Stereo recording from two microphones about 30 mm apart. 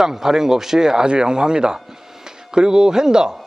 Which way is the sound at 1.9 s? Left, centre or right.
Centre.